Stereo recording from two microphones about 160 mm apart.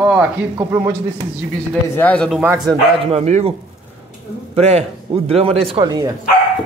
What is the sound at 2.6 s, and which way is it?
Speech, 40° right (ahead or behind).